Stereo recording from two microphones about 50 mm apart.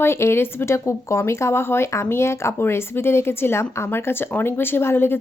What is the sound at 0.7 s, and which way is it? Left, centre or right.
Speech, left.